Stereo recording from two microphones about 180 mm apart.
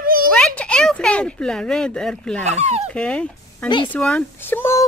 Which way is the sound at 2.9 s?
5° left (ahead or behind).